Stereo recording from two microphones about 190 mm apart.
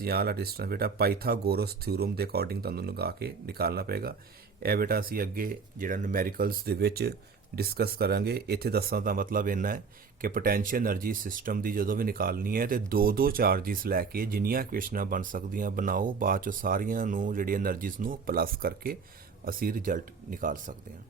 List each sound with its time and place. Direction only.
0.0 s speech: 55° right (ahead or behind)